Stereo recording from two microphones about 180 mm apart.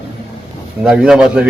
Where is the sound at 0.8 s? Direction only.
5° right (ahead or behind).